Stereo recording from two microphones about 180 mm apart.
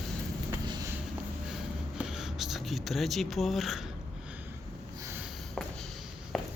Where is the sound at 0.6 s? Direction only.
25° right (ahead or behind).